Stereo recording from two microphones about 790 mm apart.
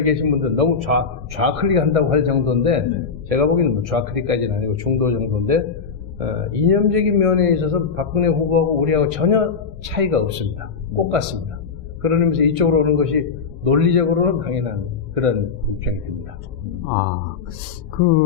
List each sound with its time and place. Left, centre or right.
0.0 s a man's voice: right